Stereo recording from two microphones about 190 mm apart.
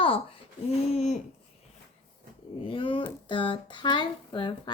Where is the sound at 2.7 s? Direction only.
25° left (ahead or behind).